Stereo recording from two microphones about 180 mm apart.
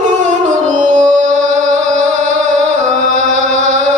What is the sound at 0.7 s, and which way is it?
Music, 45° right (ahead or behind).